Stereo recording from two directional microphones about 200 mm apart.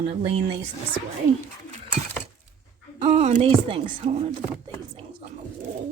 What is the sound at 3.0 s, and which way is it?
Speech, 35° right (ahead or behind).